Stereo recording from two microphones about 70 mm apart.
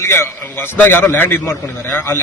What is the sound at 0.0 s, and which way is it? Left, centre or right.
A man's voice, left.